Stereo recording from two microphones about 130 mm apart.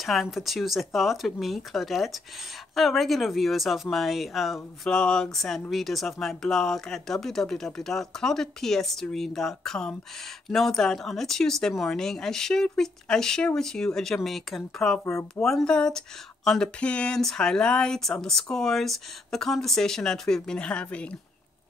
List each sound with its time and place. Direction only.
0.0 s speech: centre (ahead or behind)
15.0 s speech: 20° left (ahead or behind)
15.4 s speech: 5° left (ahead or behind)